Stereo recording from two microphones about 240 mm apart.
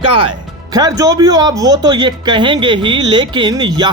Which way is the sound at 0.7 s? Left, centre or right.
Centre.